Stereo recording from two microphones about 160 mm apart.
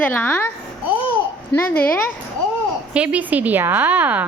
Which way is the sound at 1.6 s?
10° left (ahead or behind).